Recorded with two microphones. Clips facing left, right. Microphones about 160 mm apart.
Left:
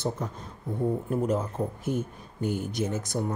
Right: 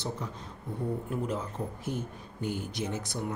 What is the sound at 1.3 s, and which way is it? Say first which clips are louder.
Speech: left 6 dB; 45° left (ahead or behind).